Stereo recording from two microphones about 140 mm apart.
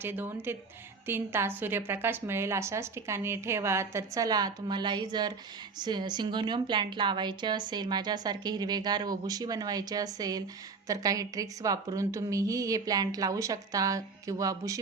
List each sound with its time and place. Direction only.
0.0 s a woman's voice: 15° right (ahead or behind)